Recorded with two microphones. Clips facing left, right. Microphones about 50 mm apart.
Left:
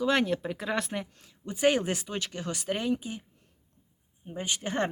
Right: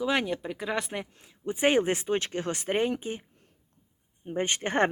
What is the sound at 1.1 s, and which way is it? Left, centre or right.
Speech, right.